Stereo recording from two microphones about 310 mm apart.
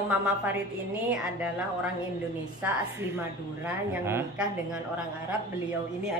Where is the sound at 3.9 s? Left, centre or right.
Centre.